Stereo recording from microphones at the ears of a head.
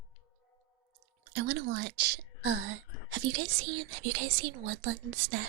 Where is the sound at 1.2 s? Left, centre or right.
Right.